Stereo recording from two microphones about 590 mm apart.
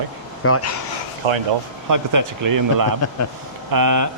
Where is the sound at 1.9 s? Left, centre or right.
Right.